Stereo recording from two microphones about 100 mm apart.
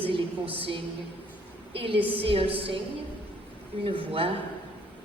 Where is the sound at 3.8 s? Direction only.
65° right (ahead or behind).